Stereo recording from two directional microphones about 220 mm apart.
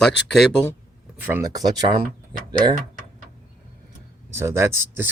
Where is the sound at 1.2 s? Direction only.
10° right (ahead or behind).